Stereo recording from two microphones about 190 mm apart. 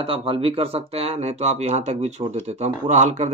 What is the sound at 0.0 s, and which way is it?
Speech, 30° right (ahead or behind).